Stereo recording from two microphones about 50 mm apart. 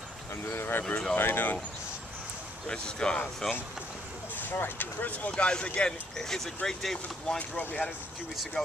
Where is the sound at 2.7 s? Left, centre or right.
Centre.